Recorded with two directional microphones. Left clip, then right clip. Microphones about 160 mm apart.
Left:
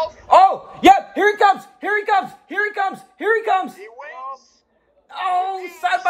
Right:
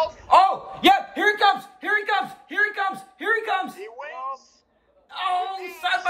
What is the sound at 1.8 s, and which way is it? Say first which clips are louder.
Speech: left 4 dB; 40° left (ahead or behind).